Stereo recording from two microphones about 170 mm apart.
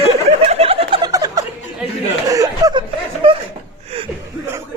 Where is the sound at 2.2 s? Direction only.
20° right (ahead or behind).